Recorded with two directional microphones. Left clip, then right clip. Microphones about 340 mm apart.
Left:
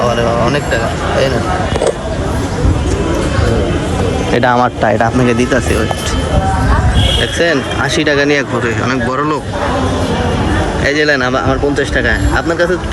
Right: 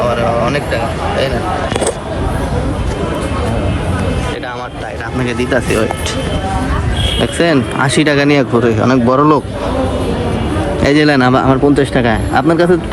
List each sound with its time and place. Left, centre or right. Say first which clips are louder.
0.0 s a sound: left 1 dB; centre
4.4 s speech: left 11 dB; left
5.2 s speech: left 3 dB; centre
7.3 s speech: even; centre
10.8 s speech: right 2 dB; centre